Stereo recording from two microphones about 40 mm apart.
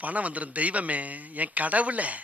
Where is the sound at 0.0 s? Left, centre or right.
Right.